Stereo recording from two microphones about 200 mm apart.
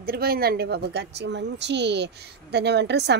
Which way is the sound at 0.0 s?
50° right (ahead or behind).